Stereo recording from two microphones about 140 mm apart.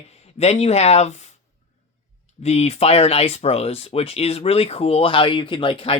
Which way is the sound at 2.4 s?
50° left (ahead or behind).